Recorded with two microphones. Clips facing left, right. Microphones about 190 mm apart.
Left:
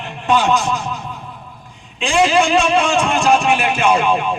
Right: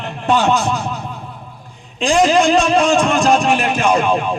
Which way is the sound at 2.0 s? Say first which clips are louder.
Right 2 dB; 40° right (ahead or behind).